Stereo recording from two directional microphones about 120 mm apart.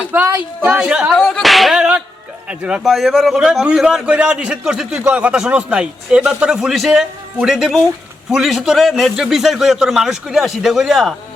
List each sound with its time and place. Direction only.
0.3 s a man's voice: 10° right (ahead or behind)